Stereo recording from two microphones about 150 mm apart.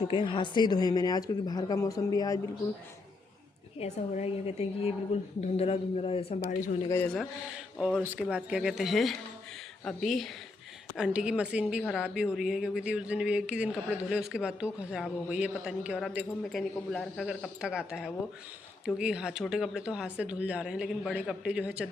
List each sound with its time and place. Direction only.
0.1 s a woman's voice: 35° left (ahead or behind)
3.8 s a woman's voice: 50° left (ahead or behind)
6.8 s a man's voice: 15° left (ahead or behind)
7.1 s a woman's voice: centre (ahead or behind)